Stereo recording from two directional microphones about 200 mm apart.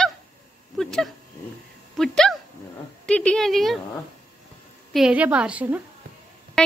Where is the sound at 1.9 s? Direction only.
Centre (ahead or behind).